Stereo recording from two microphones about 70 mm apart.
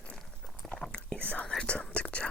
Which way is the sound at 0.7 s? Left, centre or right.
Centre.